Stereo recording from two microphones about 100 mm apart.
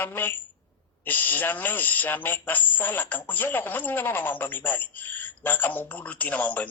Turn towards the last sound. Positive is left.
turn(degrees=15)  # may be behind; listen again after turning